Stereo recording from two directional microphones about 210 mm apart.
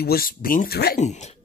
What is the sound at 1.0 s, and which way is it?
Speech, 35° left (ahead or behind).